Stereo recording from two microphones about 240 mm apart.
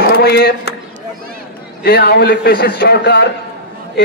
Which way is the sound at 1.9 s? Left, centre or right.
Left.